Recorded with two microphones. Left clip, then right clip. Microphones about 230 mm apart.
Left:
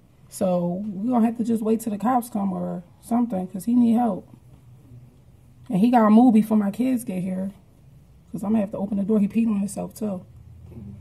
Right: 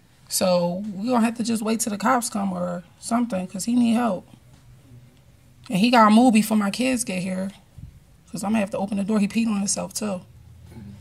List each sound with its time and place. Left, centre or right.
0.6 s speech: centre
3.5 s speech: right
5.7 s speech: right